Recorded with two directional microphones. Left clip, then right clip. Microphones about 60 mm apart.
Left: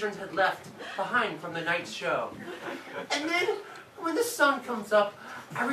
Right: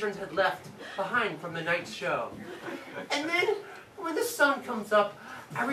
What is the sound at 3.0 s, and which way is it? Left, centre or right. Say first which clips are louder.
Speech: left 2 dB; left.